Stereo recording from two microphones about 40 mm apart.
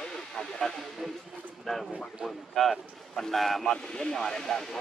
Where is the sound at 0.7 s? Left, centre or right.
Centre.